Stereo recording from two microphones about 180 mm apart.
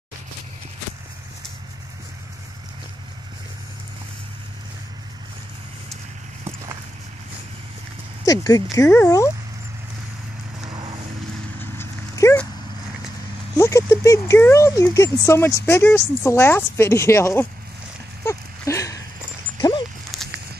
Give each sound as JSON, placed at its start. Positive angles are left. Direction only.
{"t": 8.3, "sound": "speech", "side_deg": 20}
{"t": 10.7, "sound": "vehicle", "side_deg": -25}
{"t": 11.8, "sound": "dog", "side_deg": 15}
{"t": 13.6, "sound": "speech", "side_deg": 15}
{"t": 18.2, "sound": "a sound", "side_deg": 15}
{"t": 20.1, "sound": "a sound", "side_deg": 0}